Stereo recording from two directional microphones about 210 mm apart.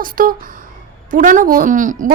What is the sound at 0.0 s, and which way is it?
A woman's voice, 40° right (ahead or behind).